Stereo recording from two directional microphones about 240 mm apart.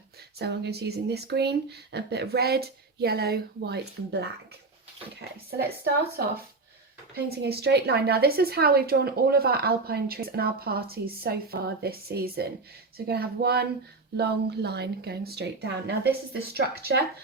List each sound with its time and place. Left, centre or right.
0.3 s speech: right
5.5 s a woman's voice: right